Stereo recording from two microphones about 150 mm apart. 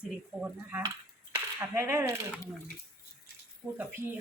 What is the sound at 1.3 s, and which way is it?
Speech, 15° right (ahead or behind).